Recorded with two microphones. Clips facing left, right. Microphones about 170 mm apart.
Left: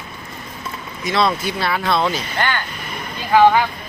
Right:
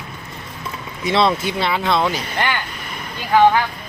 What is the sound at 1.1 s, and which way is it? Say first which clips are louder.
Speech: right 2 dB; 25° right (ahead or behind).